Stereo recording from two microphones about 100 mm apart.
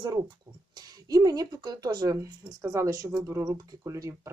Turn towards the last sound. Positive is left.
turn(degrees=-30)  # may be behind; listen again after turning